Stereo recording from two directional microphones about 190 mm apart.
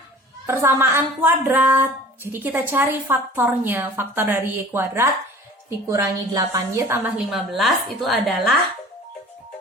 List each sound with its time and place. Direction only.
0.4 s a woman's voice: 15° right (ahead or behind)
7.3 s a woman's voice: centre (ahead or behind)